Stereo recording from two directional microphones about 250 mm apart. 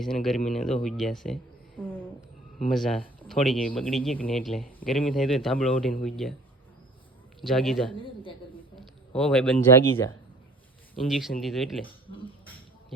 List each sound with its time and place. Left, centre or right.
0.0 s a man's voice: centre
7.4 s a man's voice: centre
7.9 s speech: left
9.1 s a man's voice: centre
12.0 s speech: left